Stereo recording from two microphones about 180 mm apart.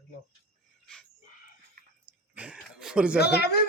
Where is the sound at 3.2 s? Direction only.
65° left (ahead or behind).